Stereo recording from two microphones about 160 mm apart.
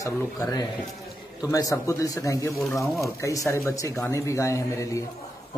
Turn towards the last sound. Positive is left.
turn(degrees=20)  # may be behind; listen again after turning